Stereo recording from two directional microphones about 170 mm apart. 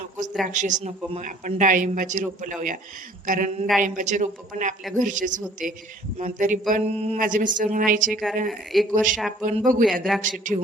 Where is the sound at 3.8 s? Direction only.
50° right (ahead or behind).